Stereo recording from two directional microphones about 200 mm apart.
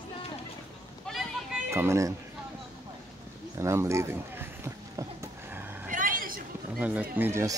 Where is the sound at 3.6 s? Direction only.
15° right (ahead or behind).